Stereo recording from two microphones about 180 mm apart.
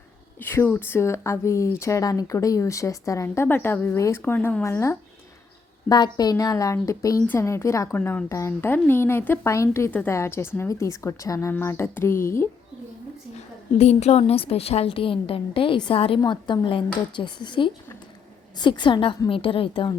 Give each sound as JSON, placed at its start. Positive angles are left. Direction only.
{"t": 0.3, "sound": "a woman's voice", "side_deg": 15}
{"t": 13.7, "sound": "a woman's voice", "side_deg": 35}